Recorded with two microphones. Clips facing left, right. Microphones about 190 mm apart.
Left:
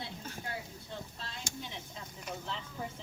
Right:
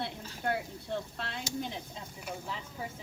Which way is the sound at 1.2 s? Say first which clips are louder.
Right 6 dB; 65° right (ahead or behind).